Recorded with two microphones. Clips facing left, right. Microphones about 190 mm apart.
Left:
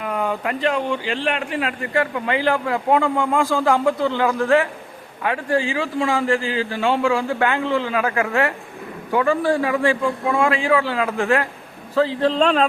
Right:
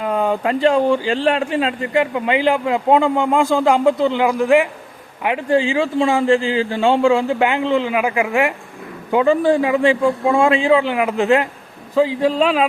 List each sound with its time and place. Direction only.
0.0 s a man's voice: 30° right (ahead or behind); by 12.6 s 5° right (ahead or behind)